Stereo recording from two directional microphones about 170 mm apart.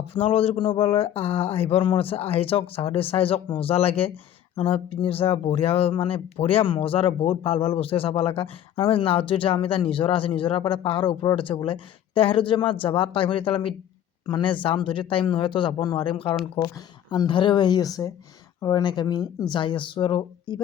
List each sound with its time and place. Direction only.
0.1 s speech: 35° left (ahead or behind)